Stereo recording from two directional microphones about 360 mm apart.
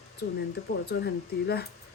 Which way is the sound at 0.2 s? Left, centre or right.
Left.